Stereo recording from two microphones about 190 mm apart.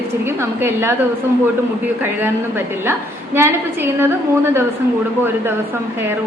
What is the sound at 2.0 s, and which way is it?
Speech, 10° right (ahead or behind).